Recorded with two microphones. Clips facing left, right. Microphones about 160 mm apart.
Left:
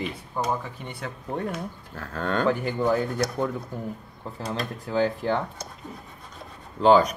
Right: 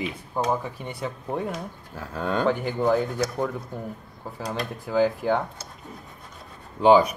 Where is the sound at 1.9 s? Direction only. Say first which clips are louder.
Right 1 dB; 10° right (ahead or behind).